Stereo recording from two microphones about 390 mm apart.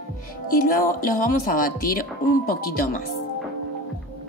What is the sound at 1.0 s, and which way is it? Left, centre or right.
Speech, left.